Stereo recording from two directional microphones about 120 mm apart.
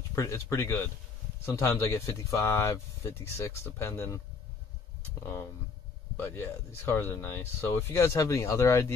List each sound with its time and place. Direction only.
0.1 s speech: 25° left (ahead or behind)
6.2 s speech: 20° left (ahead or behind)